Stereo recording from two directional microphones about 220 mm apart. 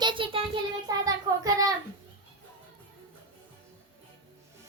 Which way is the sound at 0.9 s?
15° right (ahead or behind).